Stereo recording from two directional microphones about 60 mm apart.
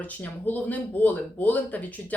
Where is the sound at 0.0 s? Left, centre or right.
Left.